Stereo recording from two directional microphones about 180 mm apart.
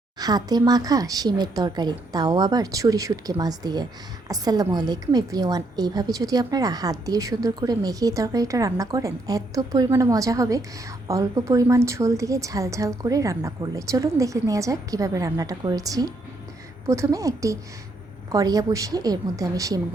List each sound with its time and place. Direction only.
0.2 s a woman's voice: 20° right (ahead or behind)